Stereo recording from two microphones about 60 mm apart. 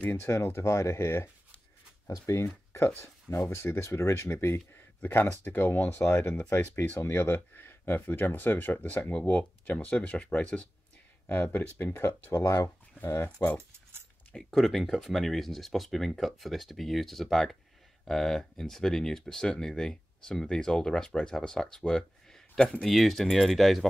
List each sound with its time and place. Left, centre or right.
0.0 s speech: left
2.0 s speech: left
3.0 s speech: left
5.0 s speech: left
11.2 s speech: left
12.3 s speech: left
14.4 s speech: centre